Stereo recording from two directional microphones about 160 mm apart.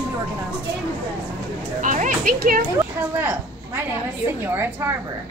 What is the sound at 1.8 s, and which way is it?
Speech, 55° right (ahead or behind).